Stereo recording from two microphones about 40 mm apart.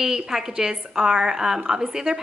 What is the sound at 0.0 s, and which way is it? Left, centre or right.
A woman's voice, centre.